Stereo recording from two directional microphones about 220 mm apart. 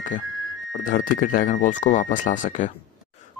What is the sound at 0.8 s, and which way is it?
Speech, 35° left (ahead or behind).